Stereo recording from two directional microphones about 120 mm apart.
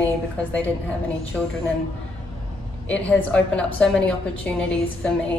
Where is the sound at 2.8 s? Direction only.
10° left (ahead or behind).